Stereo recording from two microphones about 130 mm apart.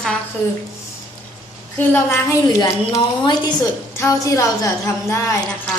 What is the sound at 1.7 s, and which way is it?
Speech, 15° left (ahead or behind).